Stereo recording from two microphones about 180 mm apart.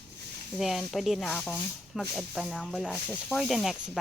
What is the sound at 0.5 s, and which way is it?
Speech, centre (ahead or behind).